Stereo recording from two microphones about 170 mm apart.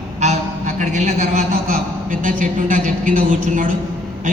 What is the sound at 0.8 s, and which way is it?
A man's voice, 45° right (ahead or behind).